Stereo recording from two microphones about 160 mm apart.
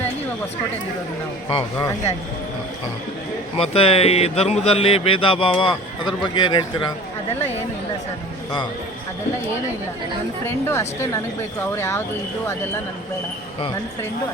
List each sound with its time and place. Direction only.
1.5 s a man's voice: 35° left (ahead or behind)
3.6 s a man's voice: 35° left (ahead or behind)
10.4 s a woman's voice: 15° left (ahead or behind)